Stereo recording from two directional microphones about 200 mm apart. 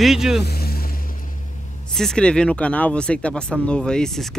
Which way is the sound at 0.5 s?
50° left (ahead or behind).